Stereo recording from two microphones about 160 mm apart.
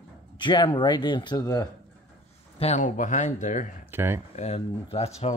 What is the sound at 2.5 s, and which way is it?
Speech, 45° left (ahead or behind).